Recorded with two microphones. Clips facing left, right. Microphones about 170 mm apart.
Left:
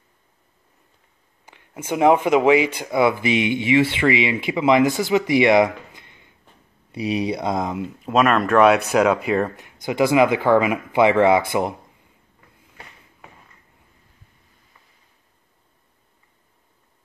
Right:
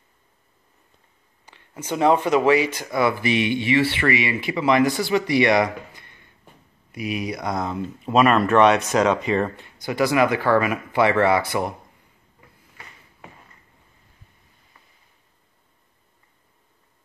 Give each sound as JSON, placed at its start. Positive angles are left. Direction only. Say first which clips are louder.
{"t": 1.5, "sound": "a sound", "louder": "left 2 dB", "side_deg": 15}
{"t": 1.9, "sound": "speech", "louder": "left 2 dB", "side_deg": 15}
{"t": 6.9, "sound": "speech", "louder": "left 5 dB", "side_deg": 30}
{"t": 8.0, "sound": "speech", "louder": "right 1 dB", "side_deg": 0}